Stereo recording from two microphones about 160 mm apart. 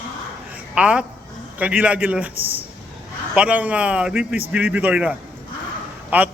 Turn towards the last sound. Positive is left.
turn(degrees=-10)  # may be behind; listen again after turning